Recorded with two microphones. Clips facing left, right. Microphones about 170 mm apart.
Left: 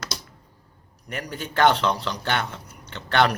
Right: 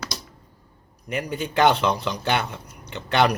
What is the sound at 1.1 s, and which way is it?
Speech, 20° right (ahead or behind).